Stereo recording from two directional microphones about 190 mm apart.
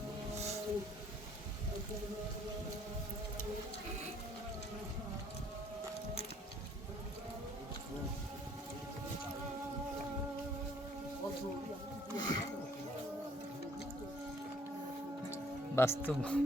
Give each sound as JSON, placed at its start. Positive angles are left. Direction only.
{"t": 12.1, "sound": "music", "side_deg": 20}
{"t": 15.7, "sound": "speech", "side_deg": 15}